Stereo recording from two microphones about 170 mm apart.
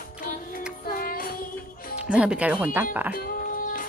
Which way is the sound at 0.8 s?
60° left (ahead or behind).